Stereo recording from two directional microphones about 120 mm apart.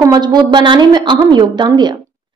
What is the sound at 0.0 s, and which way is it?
A woman's voice, 35° right (ahead or behind).